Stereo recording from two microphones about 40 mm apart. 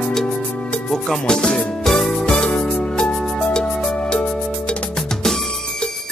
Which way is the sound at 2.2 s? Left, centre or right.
Left.